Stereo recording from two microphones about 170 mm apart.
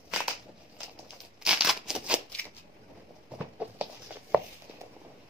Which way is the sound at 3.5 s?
10° right (ahead or behind).